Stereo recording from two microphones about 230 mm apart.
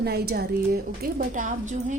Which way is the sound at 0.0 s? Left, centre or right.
Right.